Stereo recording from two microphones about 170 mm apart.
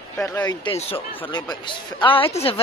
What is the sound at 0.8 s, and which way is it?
A woman's voice, 35° left (ahead or behind).